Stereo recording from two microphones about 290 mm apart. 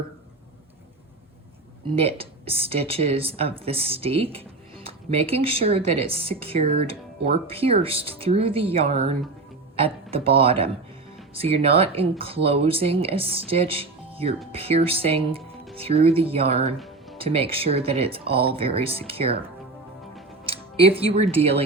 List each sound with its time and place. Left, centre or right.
2.0 s speech: centre
16.7 s music: centre
17.2 s speech: centre
20.5 s speech: centre